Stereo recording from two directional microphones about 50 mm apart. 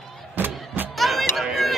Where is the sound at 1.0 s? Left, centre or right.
Centre.